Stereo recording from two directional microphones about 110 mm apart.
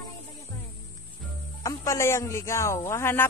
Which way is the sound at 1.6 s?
30° left (ahead or behind).